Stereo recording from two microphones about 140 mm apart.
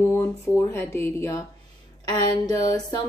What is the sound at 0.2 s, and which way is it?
Speech, 15° left (ahead or behind).